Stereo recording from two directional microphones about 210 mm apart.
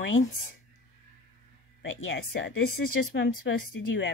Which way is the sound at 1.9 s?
65° left (ahead or behind).